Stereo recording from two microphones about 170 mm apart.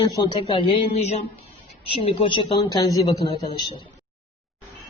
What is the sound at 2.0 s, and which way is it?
Speech, 30° left (ahead or behind).